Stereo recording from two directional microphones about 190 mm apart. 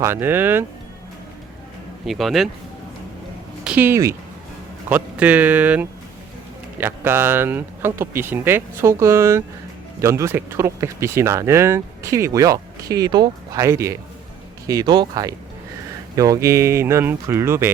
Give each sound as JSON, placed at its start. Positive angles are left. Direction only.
{"t": 0.0, "sound": "speech", "side_deg": -10}
{"t": 2.0, "sound": "speech", "side_deg": 0}
{"t": 3.6, "sound": "speech", "side_deg": -5}